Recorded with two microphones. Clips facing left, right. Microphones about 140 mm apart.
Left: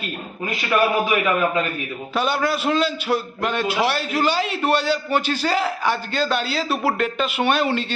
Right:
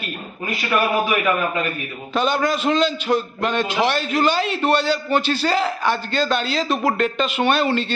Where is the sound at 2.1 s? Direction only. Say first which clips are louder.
Right 2 dB; 10° left (ahead or behind).